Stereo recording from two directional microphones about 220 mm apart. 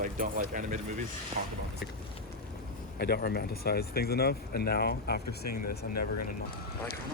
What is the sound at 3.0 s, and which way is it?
Speech, 45° left (ahead or behind).